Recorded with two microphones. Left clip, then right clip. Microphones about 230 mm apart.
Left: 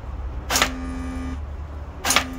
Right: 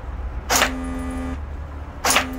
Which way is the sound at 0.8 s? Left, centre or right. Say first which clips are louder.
Right 3 dB; right.